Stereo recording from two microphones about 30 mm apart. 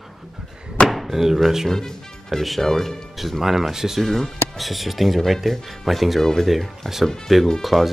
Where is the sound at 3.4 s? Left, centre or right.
Centre.